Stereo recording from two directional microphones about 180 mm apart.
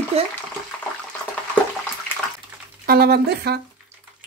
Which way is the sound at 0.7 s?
5° left (ahead or behind).